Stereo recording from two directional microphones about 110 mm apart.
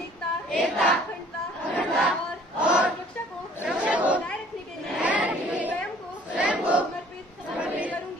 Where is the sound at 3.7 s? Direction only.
10° right (ahead or behind).